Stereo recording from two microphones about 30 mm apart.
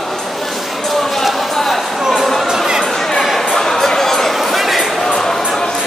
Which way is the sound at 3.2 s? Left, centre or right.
Centre.